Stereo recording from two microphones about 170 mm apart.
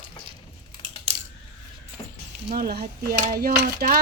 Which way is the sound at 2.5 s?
65° right (ahead or behind).